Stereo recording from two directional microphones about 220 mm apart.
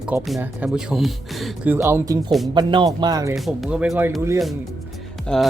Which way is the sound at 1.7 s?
10° right (ahead or behind).